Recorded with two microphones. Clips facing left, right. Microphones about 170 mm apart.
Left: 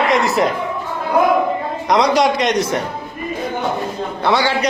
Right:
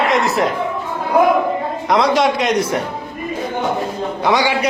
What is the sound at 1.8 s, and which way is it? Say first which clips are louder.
Speech: left 1 dB; centre (ahead or behind).